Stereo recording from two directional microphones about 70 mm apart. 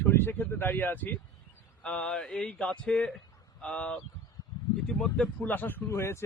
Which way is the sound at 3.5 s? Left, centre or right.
Centre.